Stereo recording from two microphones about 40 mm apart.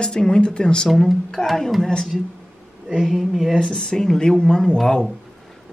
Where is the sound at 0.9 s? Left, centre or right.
Centre.